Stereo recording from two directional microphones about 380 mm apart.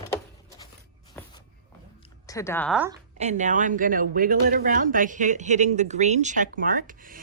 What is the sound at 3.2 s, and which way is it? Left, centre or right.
Speech, centre.